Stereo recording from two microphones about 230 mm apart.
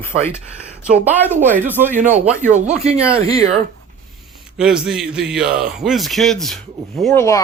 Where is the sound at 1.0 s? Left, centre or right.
Centre.